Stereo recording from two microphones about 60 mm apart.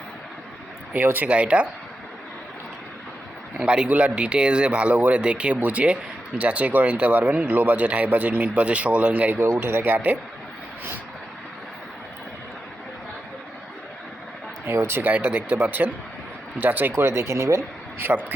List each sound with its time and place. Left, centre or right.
0.9 s speech: right
1.3 s speech: centre
3.6 s a man's voice: centre
9.4 s speech: right
14.7 s speech: right
16.9 s speech: right
18.1 s speech: right